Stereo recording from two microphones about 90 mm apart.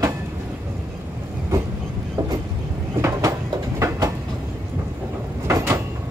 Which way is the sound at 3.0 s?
40° right (ahead or behind).